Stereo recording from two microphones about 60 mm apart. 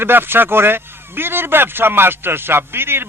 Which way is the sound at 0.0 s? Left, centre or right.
Right.